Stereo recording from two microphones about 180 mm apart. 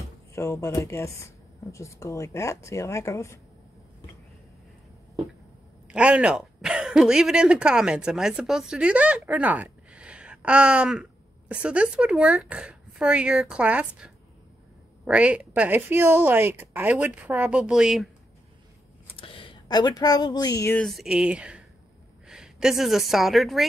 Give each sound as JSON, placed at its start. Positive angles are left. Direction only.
{"t": 0.3, "sound": "speech", "side_deg": 15}
{"t": 5.9, "sound": "a woman's voice", "side_deg": -5}
{"t": 19.1, "sound": "speech", "side_deg": 30}
{"t": 20.8, "sound": "speech", "side_deg": 0}